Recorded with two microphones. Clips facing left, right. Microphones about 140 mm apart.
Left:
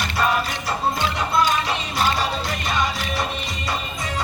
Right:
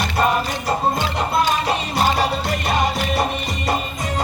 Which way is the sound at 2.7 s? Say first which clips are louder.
Right 4 dB; 55° right (ahead or behind).